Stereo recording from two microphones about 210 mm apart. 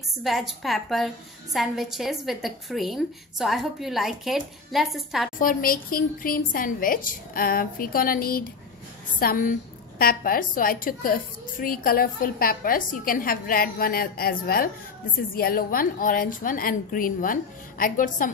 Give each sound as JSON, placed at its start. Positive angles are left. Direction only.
{"t": 0.2, "sound": "a woman's voice", "side_deg": 0}
{"t": 5.4, "sound": "a woman's voice", "side_deg": 40}